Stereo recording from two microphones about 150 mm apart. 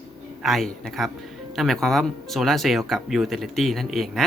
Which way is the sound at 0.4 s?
Centre (ahead or behind).